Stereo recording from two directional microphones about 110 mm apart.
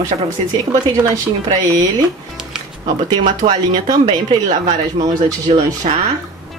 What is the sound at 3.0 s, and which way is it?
Speech, 45° right (ahead or behind).